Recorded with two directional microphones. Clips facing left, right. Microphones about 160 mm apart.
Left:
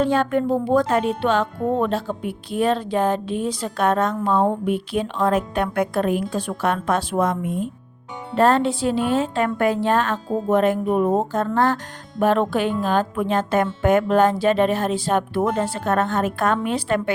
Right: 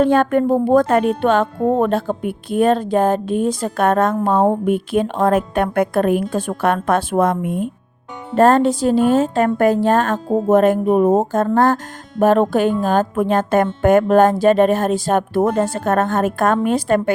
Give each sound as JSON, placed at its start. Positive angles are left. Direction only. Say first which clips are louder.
{"t": 0.0, "sound": "speech", "louder": "right 5 dB", "side_deg": -55}
{"t": 8.4, "sound": "speech", "louder": "right 5 dB", "side_deg": -45}